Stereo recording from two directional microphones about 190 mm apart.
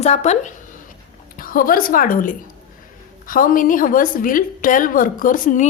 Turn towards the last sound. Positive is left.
turn(degrees=45)  # may be behind; listen again after turning